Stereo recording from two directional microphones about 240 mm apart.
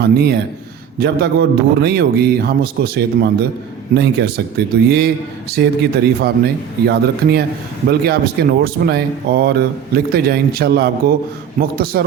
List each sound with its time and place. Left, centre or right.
0.0 s a man's voice: right